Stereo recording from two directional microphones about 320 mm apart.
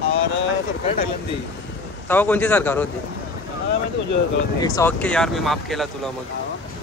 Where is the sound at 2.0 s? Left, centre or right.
Centre.